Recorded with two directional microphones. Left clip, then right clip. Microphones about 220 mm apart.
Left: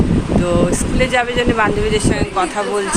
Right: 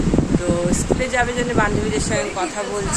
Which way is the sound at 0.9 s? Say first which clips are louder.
Left 6 dB; 10° right (ahead or behind).